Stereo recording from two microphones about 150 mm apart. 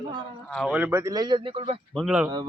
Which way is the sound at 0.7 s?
10° right (ahead or behind).